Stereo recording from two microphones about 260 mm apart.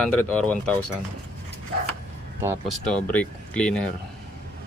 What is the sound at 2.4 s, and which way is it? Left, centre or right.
Speech, centre.